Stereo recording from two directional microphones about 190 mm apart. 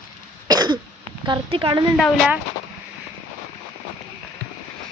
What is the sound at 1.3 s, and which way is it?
Speech, 25° right (ahead or behind).